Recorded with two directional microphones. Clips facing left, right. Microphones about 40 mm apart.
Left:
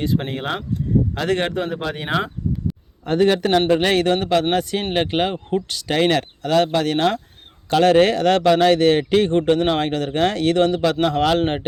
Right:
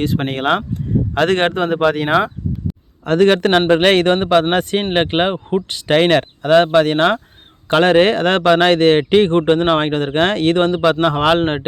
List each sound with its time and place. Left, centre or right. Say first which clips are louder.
0.0 s speech: right 4 dB; right
1.1 s a man's voice: right 6 dB; right
3.1 s a man's voice: right 4 dB; right
3.7 s a man's voice: right 5 dB; right
4.1 s speech: right 4 dB; right
5.9 s speech: right 5 dB; right